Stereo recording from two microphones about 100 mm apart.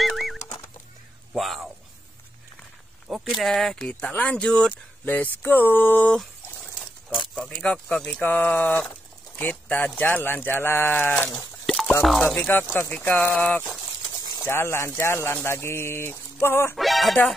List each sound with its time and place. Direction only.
0.0 s horse: centre (ahead or behind)
1.3 s a sound: centre (ahead or behind)
3.1 s speech: centre (ahead or behind)
5.1 s speech: 20° left (ahead or behind)
7.6 s speech: 10° left (ahead or behind)
11.2 s a sound: 5° left (ahead or behind)
12.0 s speech: centre (ahead or behind); by 16.7 s 25° left (ahead or behind)
16.7 s speech: centre (ahead or behind)